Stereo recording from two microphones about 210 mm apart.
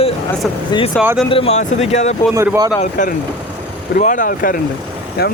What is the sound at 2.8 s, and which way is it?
A man's voice, 35° left (ahead or behind).